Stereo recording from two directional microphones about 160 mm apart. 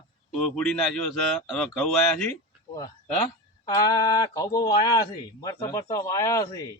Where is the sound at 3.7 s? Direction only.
25° left (ahead or behind).